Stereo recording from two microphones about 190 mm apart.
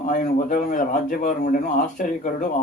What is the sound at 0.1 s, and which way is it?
Speech, 45° left (ahead or behind).